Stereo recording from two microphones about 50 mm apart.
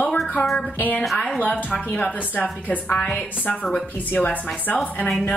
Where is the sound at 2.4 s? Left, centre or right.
Left.